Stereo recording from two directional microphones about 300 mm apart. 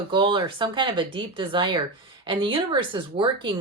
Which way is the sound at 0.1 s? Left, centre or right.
Centre.